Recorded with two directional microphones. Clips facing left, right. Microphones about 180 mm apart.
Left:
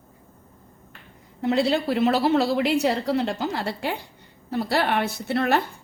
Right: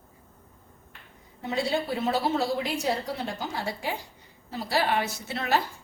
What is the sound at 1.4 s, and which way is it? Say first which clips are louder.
A woman's voice: left 6 dB; 70° left (ahead or behind).